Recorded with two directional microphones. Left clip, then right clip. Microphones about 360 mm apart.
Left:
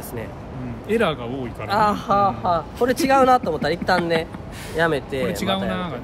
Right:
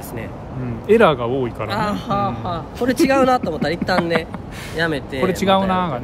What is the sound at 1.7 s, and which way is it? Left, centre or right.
A man's voice, centre.